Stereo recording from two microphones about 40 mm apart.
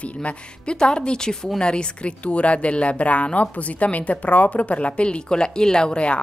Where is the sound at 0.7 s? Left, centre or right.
Left.